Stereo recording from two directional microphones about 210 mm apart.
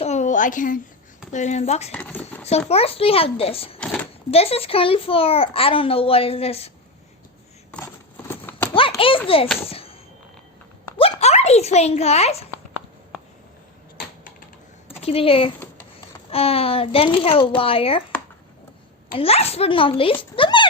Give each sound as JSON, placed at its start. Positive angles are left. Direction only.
{"t": 0.0, "sound": "a sound", "side_deg": 35}
{"t": 1.3, "sound": "speech", "side_deg": 35}
{"t": 1.9, "sound": "speech", "side_deg": 5}
{"t": 2.6, "sound": "a child's voice", "side_deg": 30}
{"t": 3.8, "sound": "a sound", "side_deg": 5}
{"t": 4.3, "sound": "a child's voice", "side_deg": 30}
{"t": 8.3, "sound": "horse", "side_deg": 10}
{"t": 9.0, "sound": "a child's voice", "side_deg": 25}
{"t": 9.6, "sound": "a sound", "side_deg": 25}
{"t": 14.8, "sound": "a child's voice", "side_deg": 25}
{"t": 19.1, "sound": "a child's voice", "side_deg": 25}
{"t": 20.3, "sound": "a sound", "side_deg": 25}